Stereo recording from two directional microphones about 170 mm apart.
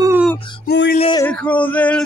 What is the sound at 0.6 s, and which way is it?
Music, 80° left.